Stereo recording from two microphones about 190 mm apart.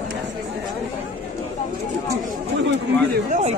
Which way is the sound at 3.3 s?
35° right (ahead or behind).